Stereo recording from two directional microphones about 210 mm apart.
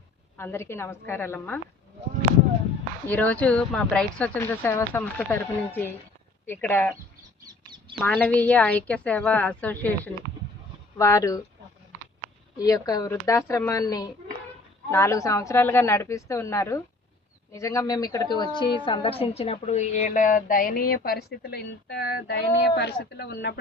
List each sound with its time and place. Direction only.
0.3 s speech: 10° left (ahead or behind)
3.1 s speech: 5° left (ahead or behind)
7.9 s speech: 5° left (ahead or behind)
12.5 s a woman's voice: 15° left (ahead or behind); by 23.6 s 50° left (ahead or behind)